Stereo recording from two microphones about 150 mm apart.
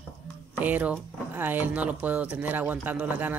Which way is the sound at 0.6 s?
10° right (ahead or behind).